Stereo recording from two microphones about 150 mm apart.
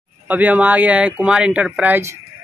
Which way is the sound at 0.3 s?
10° right (ahead or behind).